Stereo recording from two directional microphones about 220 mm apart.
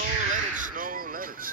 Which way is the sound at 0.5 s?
35° right (ahead or behind).